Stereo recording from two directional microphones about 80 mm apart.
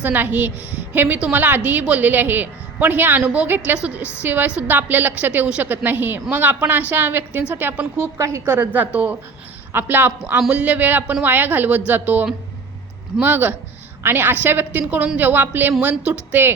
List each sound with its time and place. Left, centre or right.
0.0 s a woman's voice: right
8.5 s a woman's voice: right